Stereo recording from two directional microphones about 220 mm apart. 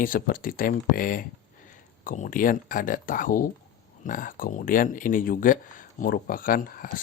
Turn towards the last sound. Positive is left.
turn(degrees=40)  # may be behind; listen again after turning